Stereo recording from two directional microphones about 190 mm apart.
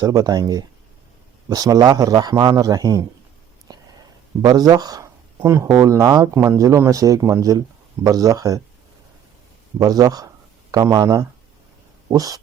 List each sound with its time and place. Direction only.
0.0 s a man's voice: 20° right (ahead or behind)
3.7 s a sound: 20° right (ahead or behind)
4.4 s a man's voice: 20° right (ahead or behind)
9.7 s a man's voice: 20° right (ahead or behind)